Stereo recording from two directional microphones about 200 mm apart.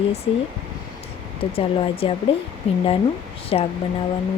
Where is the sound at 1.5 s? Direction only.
30° left (ahead or behind).